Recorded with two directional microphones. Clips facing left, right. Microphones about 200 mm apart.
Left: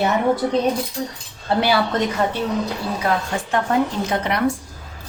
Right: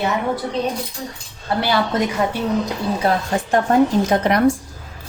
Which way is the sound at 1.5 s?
25° left (ahead or behind).